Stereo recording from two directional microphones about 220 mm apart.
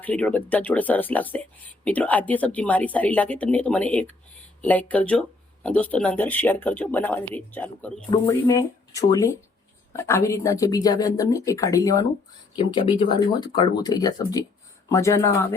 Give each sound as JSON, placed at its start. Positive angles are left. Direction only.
{"t": 0.0, "sound": "speech", "side_deg": 5}